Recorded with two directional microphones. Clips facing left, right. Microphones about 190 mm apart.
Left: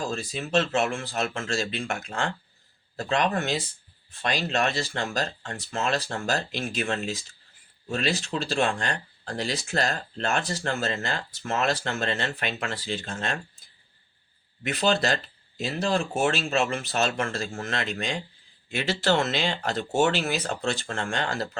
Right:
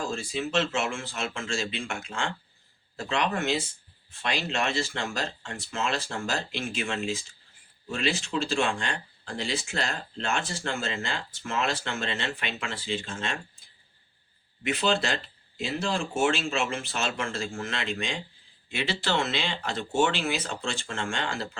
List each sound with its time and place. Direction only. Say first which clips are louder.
0.1 s speech: left 2 dB; 40° left (ahead or behind)
14.6 s speech: left 2 dB; 40° left (ahead or behind)